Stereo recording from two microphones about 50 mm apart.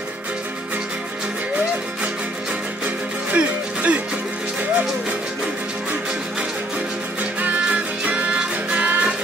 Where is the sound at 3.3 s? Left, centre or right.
Right.